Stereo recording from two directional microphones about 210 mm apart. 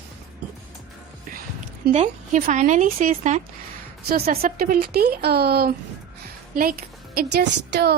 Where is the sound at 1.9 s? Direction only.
35° right (ahead or behind).